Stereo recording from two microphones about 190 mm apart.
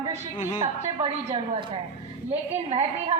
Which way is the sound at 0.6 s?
30° right (ahead or behind).